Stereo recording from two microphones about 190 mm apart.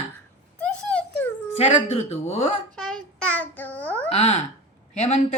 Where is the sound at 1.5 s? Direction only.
30° left (ahead or behind).